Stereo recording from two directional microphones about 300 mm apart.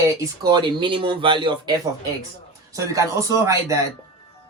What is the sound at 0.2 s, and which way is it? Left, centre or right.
Speech, centre.